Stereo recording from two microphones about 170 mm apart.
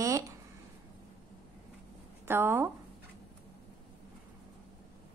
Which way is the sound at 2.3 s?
15° right (ahead or behind).